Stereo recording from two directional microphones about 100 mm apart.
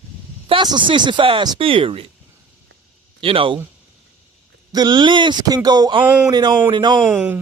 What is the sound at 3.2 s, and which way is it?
Speech, 65° right (ahead or behind).